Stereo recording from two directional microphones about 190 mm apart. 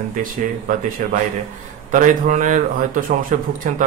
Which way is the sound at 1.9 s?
40° right (ahead or behind).